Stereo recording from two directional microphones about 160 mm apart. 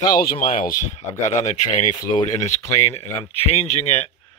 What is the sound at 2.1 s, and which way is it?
Speech, 30° left (ahead or behind).